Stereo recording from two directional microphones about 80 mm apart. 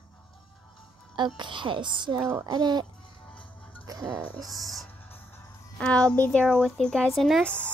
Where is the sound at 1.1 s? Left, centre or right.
Right.